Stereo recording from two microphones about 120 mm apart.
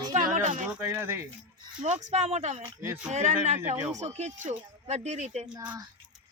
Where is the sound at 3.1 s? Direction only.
75° right (ahead or behind).